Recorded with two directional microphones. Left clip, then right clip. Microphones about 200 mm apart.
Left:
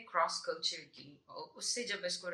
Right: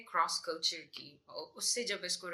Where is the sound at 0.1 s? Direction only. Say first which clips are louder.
Right 1 dB; 55° right (ahead or behind).